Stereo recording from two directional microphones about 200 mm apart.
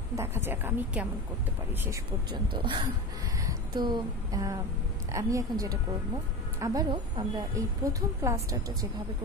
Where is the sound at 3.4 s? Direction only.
20° right (ahead or behind).